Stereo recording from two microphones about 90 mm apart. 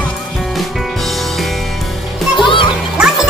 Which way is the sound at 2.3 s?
70° left (ahead or behind).